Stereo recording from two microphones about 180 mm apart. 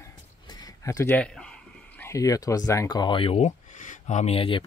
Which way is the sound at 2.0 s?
15° left (ahead or behind).